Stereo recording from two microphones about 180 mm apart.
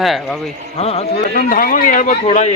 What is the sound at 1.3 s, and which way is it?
A man's voice, 55° left (ahead or behind).